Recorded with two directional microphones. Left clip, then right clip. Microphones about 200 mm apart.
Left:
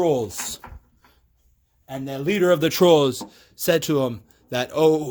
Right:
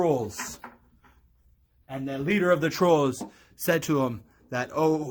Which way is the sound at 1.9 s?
55° left (ahead or behind).